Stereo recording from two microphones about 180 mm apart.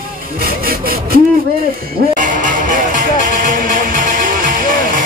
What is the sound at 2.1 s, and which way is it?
Music, 45° right (ahead or behind).